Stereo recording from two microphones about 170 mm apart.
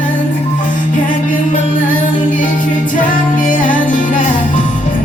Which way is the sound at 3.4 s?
50° left (ahead or behind).